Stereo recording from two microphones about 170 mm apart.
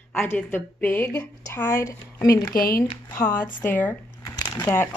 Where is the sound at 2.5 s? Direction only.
60° left (ahead or behind).